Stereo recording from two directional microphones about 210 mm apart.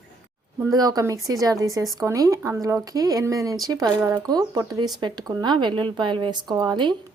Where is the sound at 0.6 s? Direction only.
15° right (ahead or behind).